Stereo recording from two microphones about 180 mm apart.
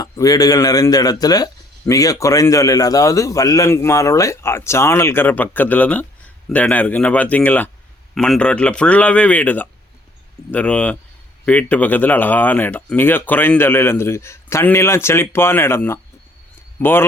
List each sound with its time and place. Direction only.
0.0 s a man's voice: 20° left (ahead or behind)